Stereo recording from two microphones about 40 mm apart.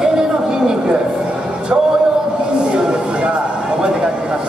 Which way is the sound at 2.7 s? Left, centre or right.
Right.